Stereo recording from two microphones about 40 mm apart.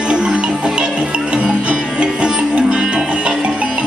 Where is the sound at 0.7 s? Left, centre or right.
Right.